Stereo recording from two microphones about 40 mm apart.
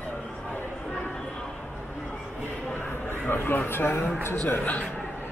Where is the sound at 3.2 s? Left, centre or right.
Left.